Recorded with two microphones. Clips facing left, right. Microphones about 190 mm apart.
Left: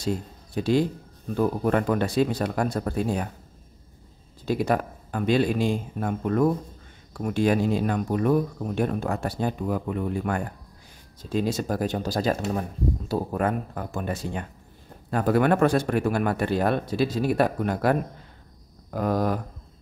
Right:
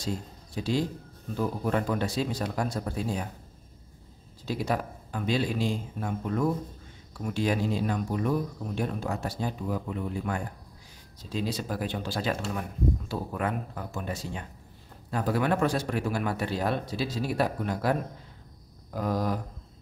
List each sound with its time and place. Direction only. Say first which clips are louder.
0.6 s speech: left 6 dB; 55° left (ahead or behind)
4.5 s speech: left 6 dB; 55° left (ahead or behind)